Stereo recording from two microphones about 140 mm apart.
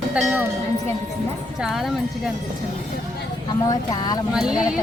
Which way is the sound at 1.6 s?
Centre (ahead or behind).